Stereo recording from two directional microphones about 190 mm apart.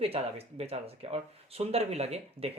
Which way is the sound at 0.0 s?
30° right (ahead or behind).